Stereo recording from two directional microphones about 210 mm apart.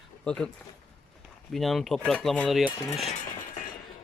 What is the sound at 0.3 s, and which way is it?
Speech, 5° left (ahead or behind).